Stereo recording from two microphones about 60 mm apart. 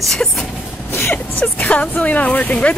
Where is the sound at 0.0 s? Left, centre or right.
Centre.